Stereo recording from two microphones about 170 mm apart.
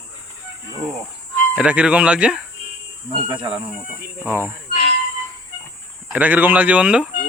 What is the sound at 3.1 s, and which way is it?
Speech, 30° right (ahead or behind).